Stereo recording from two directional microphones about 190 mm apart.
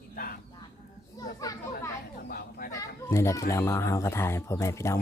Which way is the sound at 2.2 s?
50° left (ahead or behind).